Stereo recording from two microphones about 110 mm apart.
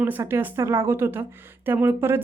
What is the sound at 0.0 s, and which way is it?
Speech, 20° right (ahead or behind).